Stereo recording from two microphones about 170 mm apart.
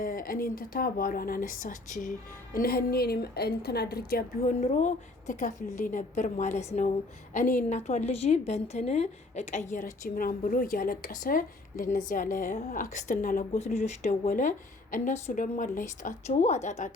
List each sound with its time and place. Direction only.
0.0 s a woman's voice: 55° left (ahead or behind)